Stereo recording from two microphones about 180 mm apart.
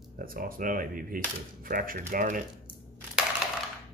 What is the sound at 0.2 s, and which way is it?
Speech, 50° right (ahead or behind).